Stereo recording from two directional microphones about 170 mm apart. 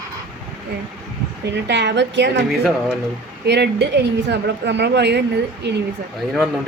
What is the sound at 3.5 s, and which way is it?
A woman's voice, 80° right.